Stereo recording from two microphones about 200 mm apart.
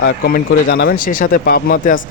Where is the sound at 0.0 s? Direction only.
50° left (ahead or behind).